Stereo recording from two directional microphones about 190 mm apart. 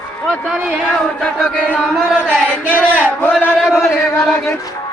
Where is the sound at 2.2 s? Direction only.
5° left (ahead or behind).